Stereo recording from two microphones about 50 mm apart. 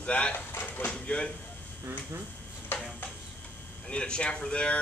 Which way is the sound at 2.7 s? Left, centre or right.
Left.